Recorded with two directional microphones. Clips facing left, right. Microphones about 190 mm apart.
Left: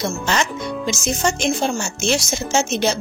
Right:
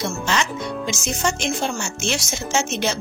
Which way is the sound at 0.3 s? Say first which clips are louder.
Left 2 dB; 40° left (ahead or behind).